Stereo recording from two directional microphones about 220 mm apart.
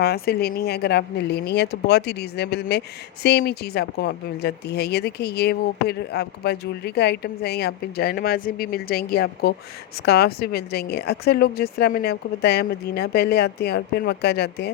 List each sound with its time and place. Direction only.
0.0 s speech: 45° left (ahead or behind)